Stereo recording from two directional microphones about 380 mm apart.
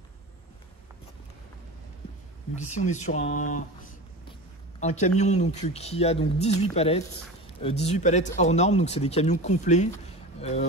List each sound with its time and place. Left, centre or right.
2.5 s speech: centre
4.7 s speech: centre